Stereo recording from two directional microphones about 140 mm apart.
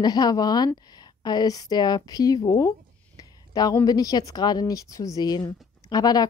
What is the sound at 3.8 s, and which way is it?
Speech, 25° left (ahead or behind).